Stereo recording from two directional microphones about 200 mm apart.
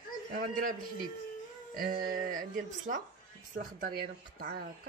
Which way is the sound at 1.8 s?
45° right (ahead or behind).